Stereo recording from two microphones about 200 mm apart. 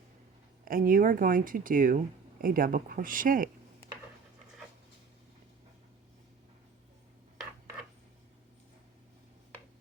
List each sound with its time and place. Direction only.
0.6 s speech: 45° right (ahead or behind)